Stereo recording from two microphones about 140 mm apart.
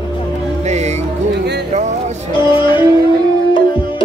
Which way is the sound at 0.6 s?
55° right (ahead or behind).